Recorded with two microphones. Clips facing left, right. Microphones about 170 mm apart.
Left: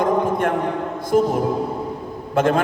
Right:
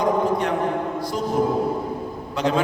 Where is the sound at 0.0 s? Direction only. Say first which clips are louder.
Left 2 dB; 50° left (ahead or behind).